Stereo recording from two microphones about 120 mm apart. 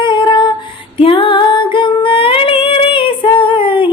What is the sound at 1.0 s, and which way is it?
Music, 45° left (ahead or behind).